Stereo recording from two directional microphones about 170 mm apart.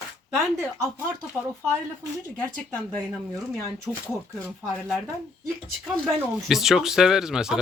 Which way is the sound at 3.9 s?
5° right (ahead or behind).